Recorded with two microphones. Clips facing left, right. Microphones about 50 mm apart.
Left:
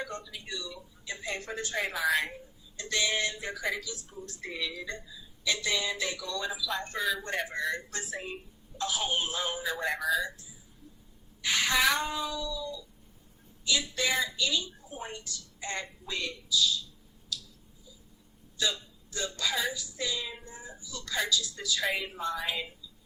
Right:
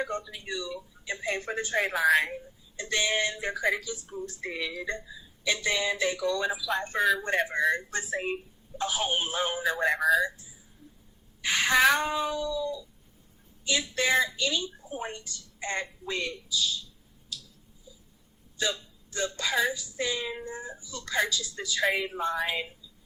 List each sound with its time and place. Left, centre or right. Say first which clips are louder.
0.1 s a woman's voice: right 5 dB; right
11.4 s a woman's voice: right 4 dB; right
18.6 s a woman's voice: right 2 dB; right